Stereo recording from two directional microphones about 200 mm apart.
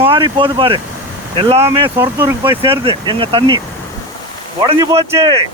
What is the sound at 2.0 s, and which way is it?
Speech, 10° right (ahead or behind).